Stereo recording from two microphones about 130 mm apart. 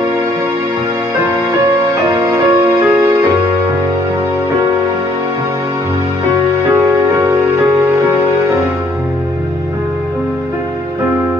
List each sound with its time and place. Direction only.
2.2 s music: 20° right (ahead or behind)
6.9 s music: 20° right (ahead or behind)